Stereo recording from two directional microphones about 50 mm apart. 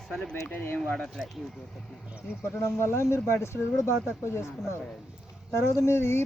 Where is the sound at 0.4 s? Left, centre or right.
Left.